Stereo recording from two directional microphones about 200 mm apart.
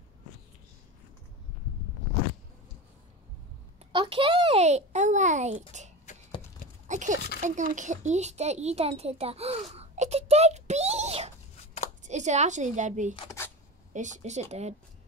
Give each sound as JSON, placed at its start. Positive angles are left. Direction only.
{"t": 3.9, "sound": "a child's voice", "side_deg": -25}
{"t": 6.1, "sound": "a sound", "side_deg": 40}
{"t": 6.9, "sound": "a sound", "side_deg": -40}
{"t": 7.4, "sound": "a woman's voice", "side_deg": -40}
{"t": 13.1, "sound": "speech", "side_deg": 25}
{"t": 13.9, "sound": "speech", "side_deg": -35}